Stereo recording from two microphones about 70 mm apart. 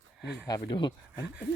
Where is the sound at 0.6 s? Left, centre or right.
Left.